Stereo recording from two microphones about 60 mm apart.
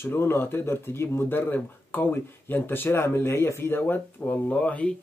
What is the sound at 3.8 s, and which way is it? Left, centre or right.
Speech, left.